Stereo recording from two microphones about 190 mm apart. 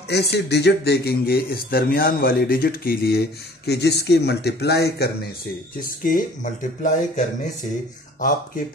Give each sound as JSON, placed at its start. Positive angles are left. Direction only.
{"t": 0.1, "sound": "speech", "side_deg": 60}
{"t": 5.8, "sound": "speech", "side_deg": 45}